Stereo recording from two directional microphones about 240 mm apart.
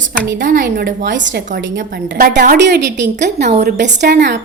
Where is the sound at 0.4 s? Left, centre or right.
Right.